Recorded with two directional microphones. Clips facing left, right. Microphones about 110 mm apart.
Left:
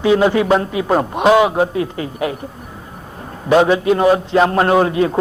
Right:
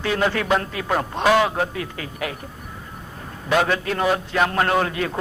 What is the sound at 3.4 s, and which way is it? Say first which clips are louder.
Speech: left 8 dB; 20° left (ahead or behind).